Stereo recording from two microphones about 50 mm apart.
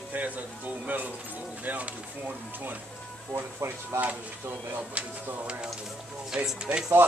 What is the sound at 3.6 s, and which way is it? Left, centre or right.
Speech, right.